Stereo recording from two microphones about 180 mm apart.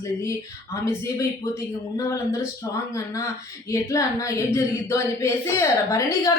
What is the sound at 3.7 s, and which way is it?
Speech, 15° left (ahead or behind).